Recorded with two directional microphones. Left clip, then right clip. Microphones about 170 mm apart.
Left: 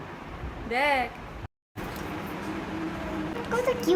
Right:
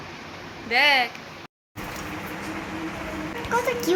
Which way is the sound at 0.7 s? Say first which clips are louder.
Right 6 dB; 10° left (ahead or behind).